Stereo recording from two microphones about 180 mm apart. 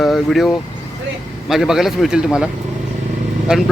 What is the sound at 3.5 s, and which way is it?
Speech, centre (ahead or behind).